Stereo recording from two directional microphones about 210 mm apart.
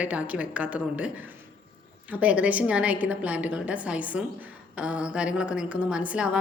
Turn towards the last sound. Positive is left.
turn(degrees=-5)  # may be behind; listen again after turning